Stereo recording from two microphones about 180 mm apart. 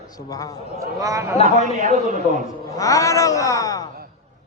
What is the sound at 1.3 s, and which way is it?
Speech, 35° left (ahead or behind).